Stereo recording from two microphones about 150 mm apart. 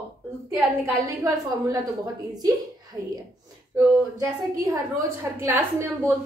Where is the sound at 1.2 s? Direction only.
25° right (ahead or behind).